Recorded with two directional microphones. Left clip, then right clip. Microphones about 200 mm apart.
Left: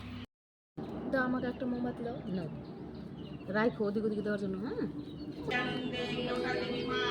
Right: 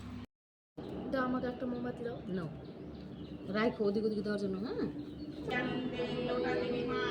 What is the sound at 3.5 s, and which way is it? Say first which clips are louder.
Speech: left 1 dB; 15° right (ahead or behind).